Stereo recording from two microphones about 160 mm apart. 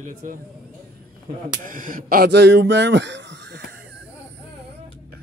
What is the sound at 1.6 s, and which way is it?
Speech, 55° right (ahead or behind).